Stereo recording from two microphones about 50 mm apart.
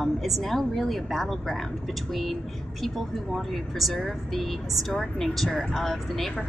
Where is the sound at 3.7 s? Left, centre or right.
Centre.